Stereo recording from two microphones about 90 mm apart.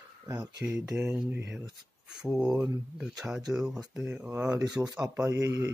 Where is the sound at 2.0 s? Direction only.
5° right (ahead or behind).